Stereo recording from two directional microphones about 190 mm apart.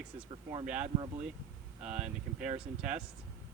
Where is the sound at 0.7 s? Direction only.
35° right (ahead or behind).